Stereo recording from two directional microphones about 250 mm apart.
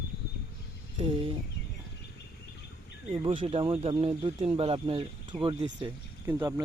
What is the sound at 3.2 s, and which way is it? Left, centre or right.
Speech, right.